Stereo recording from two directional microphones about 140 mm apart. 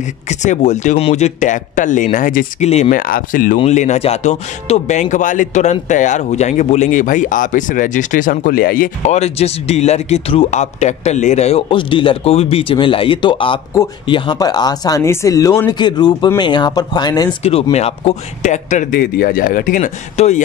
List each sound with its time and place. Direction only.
0.0 s speech: 60° left (ahead or behind)
2.9 s speech: 90° left
3.5 s speech: 55° left (ahead or behind); by 8.9 s 90° left
9.0 s speech: 50° left (ahead or behind)
11.7 s speech: 35° left (ahead or behind)
17.4 s speech: 45° left (ahead or behind); by 19.9 s 75° left (ahead or behind)
20.2 s speech: 55° left (ahead or behind)